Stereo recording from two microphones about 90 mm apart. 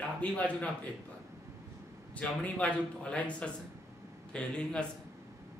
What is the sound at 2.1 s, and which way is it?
Speech, 15° left (ahead or behind).